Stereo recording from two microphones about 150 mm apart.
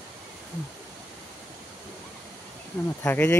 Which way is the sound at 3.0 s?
15° left (ahead or behind).